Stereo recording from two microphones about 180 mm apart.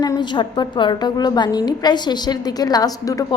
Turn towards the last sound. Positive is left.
turn(degrees=20)  # may be behind; listen again after turning